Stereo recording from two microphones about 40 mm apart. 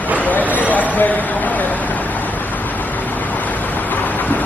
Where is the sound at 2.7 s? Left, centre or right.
Left.